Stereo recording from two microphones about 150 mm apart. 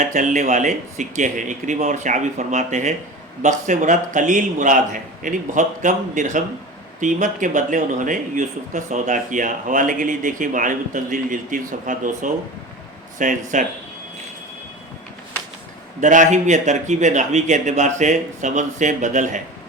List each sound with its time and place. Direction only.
0.0 s speech: 55° right (ahead or behind)
16.0 s speech: 55° right (ahead or behind)